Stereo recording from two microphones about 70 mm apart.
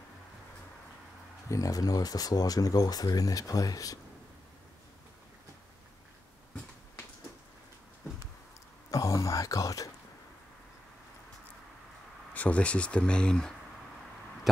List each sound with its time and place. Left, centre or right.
1.5 s speech: left
8.9 s a sound: left
12.4 s speech: centre